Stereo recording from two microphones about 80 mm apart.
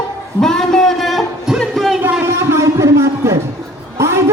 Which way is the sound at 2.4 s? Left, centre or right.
Right.